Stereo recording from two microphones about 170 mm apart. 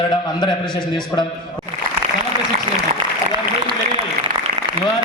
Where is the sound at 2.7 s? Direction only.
30° right (ahead or behind).